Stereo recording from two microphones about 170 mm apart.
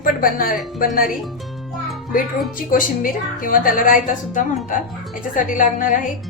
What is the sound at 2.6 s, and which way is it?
A woman's voice, 55° left (ahead or behind).